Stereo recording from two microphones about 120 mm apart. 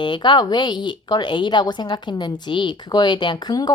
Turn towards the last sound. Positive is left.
turn(degrees=35)  # may be behind; listen again after turning